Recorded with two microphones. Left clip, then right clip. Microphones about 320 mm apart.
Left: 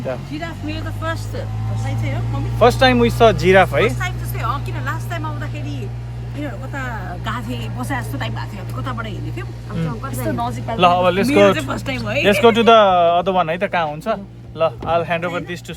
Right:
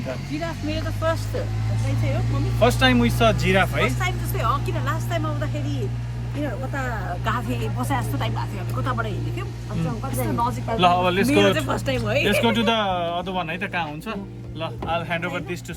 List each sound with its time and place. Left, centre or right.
0.3 s speech: centre
2.6 s speech: centre
4.0 s speech: centre
10.3 s speech: centre
10.8 s speech: centre
11.5 s speech: centre
12.2 s speech: left